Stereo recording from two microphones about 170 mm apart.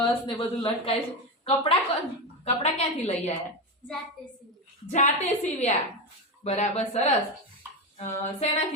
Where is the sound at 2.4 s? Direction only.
40° left (ahead or behind).